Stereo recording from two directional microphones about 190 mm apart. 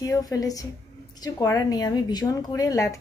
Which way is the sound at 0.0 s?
20° left (ahead or behind).